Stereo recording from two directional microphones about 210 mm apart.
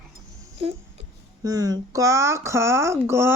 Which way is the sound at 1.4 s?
15° right (ahead or behind).